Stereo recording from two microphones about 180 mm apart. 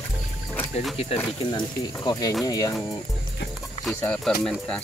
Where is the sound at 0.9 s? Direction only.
30° left (ahead or behind).